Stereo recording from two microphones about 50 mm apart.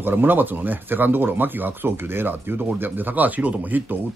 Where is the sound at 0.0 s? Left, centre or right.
Right.